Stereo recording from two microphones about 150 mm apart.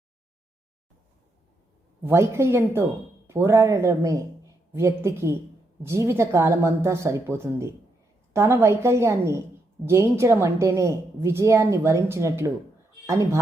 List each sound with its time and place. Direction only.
2.0 s a woman's voice: 15° right (ahead or behind)